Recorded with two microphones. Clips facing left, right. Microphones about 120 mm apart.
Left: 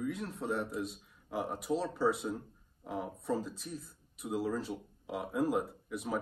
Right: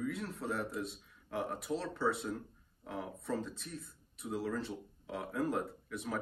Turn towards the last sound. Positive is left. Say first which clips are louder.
# left 2 dB
turn(degrees=0)  # may be behind; listen again after turning